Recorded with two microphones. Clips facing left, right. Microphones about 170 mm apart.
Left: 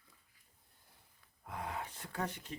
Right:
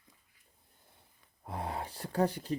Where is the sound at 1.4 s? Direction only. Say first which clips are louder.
Right 4 dB; 30° right (ahead or behind).